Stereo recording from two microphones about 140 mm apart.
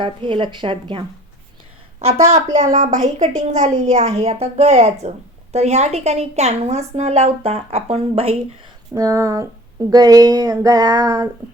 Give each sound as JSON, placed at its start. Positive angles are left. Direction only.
{"t": 0.0, "sound": "speech", "side_deg": -40}
{"t": 2.2, "sound": "a woman's voice", "side_deg": -55}
{"t": 9.0, "sound": "a sound", "side_deg": -20}